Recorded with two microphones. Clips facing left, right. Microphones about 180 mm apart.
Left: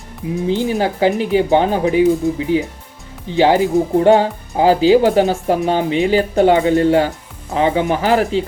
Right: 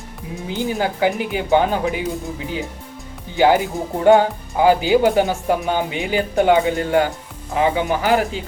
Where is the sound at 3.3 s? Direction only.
30° left (ahead or behind).